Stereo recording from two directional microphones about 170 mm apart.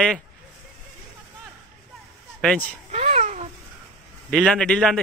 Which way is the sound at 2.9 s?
40° right (ahead or behind).